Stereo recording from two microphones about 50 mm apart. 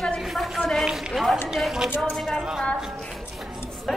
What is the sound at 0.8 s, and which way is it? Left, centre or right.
Run, centre.